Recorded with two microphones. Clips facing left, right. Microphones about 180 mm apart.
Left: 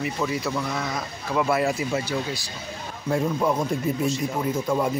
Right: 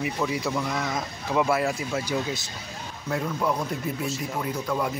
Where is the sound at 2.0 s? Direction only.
20° right (ahead or behind).